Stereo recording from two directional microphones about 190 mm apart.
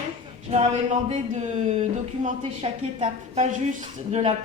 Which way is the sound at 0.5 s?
35° right (ahead or behind).